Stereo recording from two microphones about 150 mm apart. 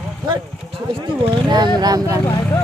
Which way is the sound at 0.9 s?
30° right (ahead or behind).